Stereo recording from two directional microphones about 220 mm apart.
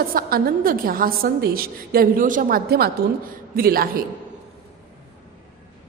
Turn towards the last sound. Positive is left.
turn(degrees=-40)  # may be behind; listen again after turning